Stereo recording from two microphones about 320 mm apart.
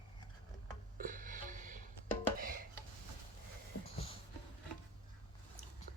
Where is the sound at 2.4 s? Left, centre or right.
Right.